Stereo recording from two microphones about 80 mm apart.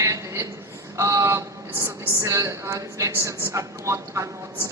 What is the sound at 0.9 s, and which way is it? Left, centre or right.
A woman's voice, right.